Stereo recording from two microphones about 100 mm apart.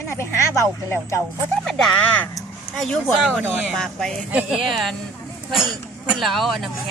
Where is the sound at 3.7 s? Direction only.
5° left (ahead or behind).